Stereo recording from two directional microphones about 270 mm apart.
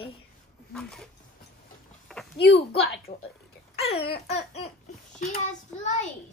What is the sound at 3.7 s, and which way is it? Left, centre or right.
Babbling, left.